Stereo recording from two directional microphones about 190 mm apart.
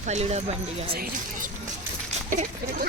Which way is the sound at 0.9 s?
50° right (ahead or behind).